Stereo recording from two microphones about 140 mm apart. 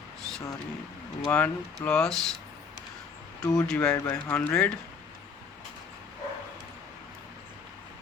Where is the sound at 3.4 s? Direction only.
25° left (ahead or behind).